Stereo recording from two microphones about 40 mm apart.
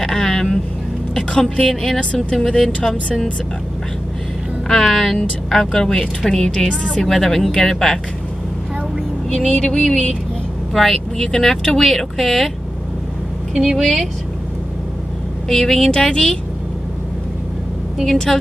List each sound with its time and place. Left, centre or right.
0.0 s vehicle: centre
1.1 s speech: left
4.6 s speech: centre
9.3 s speech: centre
10.7 s speech: centre
11.1 s speech: centre
13.6 s speech: centre
15.4 s speech: centre
18.1 s speech: centre